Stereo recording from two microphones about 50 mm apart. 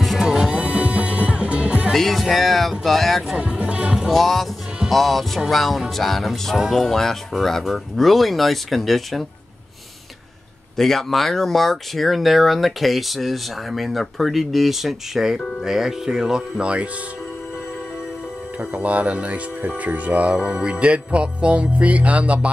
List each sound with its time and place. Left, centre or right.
0.0 s music: centre; by 1.9 s right
2.0 s speech: centre
3.3 s music: right
4.1 s speech: centre
10.8 s speech: centre; by 16.9 s right
18.6 s music: right